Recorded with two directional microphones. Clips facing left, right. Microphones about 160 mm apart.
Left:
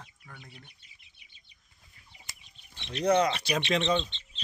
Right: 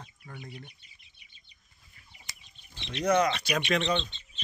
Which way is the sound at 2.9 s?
30° left (ahead or behind).